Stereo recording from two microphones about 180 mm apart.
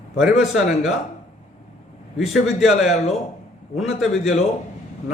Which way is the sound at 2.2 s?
Centre (ahead or behind).